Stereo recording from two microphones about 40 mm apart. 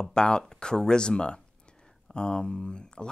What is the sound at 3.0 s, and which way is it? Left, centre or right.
Speech, centre.